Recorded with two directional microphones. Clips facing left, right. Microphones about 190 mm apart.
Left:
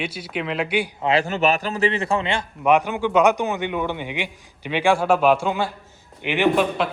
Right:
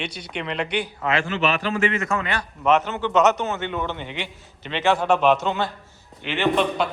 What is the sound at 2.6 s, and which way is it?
A man's voice, 10° left (ahead or behind).